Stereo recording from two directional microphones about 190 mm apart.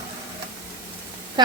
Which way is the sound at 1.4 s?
20° right (ahead or behind).